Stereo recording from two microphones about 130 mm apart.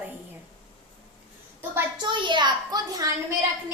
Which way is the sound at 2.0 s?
35° right (ahead or behind).